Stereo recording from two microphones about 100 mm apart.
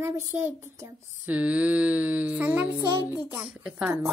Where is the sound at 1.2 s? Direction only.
15° right (ahead or behind).